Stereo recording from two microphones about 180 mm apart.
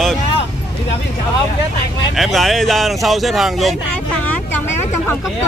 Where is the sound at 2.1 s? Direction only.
Centre (ahead or behind).